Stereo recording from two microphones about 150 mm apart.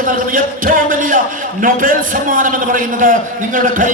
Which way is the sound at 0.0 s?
65° right (ahead or behind).